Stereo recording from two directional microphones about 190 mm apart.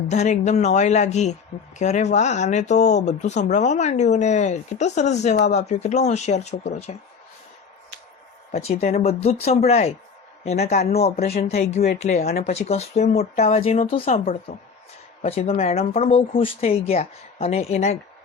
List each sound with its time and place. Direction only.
0.1 s speech: 35° left (ahead or behind)
8.5 s speech: 35° left (ahead or behind)
11.2 s speech: 55° left (ahead or behind)
11.4 s speech: 35° left (ahead or behind)